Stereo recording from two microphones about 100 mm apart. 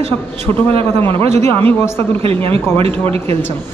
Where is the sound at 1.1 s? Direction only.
80° right.